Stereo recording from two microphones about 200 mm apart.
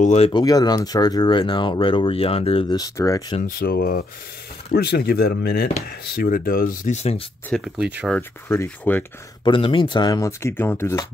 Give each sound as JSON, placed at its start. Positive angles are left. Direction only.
{"t": 0.0, "sound": "speech", "side_deg": 35}
{"t": 0.3, "sound": "speech", "side_deg": 20}
{"t": 3.4, "sound": "speech", "side_deg": 50}
{"t": 7.4, "sound": "speech", "side_deg": 0}
{"t": 8.2, "sound": "speech", "side_deg": 10}
{"t": 9.4, "sound": "speech", "side_deg": 25}